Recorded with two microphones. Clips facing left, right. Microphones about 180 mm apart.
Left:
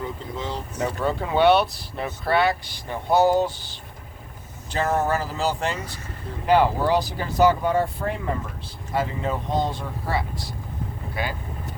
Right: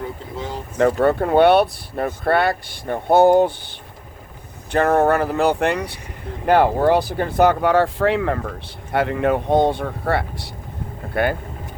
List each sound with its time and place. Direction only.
0.3 s speech: 10° right (ahead or behind)
0.8 s speech: 60° right (ahead or behind)